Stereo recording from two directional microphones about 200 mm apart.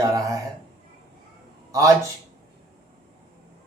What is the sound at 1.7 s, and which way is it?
Speech, 15° right (ahead or behind).